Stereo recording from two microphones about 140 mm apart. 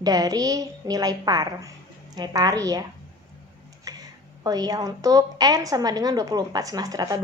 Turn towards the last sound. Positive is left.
turn(degrees=-25)  # may be behind; listen again after turning